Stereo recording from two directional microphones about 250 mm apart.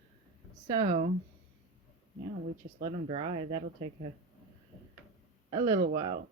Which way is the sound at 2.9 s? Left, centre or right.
Right.